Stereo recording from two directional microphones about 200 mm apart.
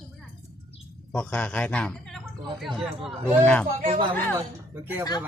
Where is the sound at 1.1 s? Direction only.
10° left (ahead or behind).